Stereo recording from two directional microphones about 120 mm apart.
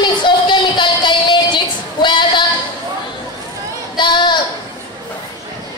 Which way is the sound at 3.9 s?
40° left (ahead or behind).